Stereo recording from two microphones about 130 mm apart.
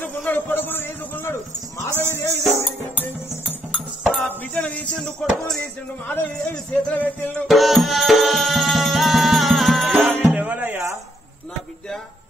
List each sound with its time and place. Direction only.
0.0 s a sound: 15° left (ahead or behind)
2.0 s music: 15° left (ahead or behind)
7.4 s music: centre (ahead or behind)
9.9 s music: 15° right (ahead or behind)